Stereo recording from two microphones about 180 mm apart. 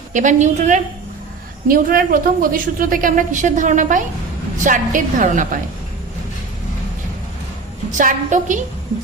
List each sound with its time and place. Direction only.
0.1 s a woman's voice: 45° right (ahead or behind)
7.9 s a woman's voice: 45° right (ahead or behind)